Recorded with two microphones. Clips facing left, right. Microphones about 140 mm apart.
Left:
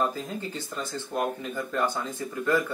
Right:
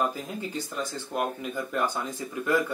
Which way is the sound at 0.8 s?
15° right (ahead or behind).